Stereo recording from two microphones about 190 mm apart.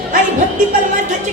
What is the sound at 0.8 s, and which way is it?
Speech, 40° right (ahead or behind).